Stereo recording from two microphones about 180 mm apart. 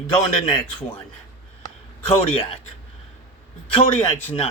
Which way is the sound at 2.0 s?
35° left (ahead or behind).